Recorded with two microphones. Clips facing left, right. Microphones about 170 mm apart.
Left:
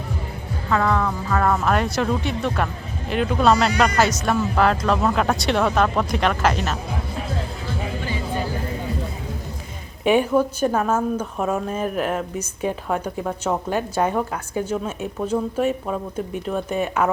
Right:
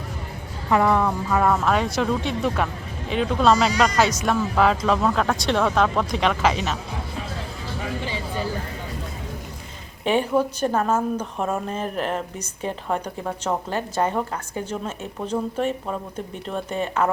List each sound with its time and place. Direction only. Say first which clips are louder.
0.7 s speech: right 2 dB; 20° right (ahead or behind)
1.4 s a woman's voice: left 1 dB; centre (ahead or behind)
10.0 s a woman's voice: left 3 dB; 10° left (ahead or behind)